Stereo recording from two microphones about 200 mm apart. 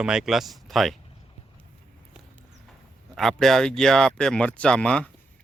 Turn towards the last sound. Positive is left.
turn(degrees=5)  # may be behind; listen again after turning